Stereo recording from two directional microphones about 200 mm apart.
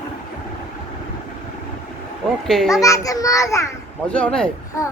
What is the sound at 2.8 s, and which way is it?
A child's voice, 15° left (ahead or behind).